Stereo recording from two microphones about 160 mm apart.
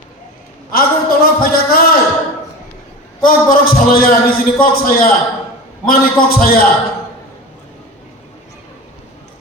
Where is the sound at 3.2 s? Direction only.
65° left (ahead or behind).